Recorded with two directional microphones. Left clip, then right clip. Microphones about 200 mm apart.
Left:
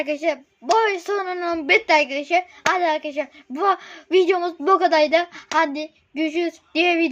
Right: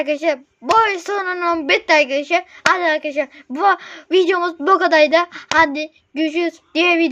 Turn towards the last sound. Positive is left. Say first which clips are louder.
# right 4 dB
turn(degrees=-25)  # may be behind; listen again after turning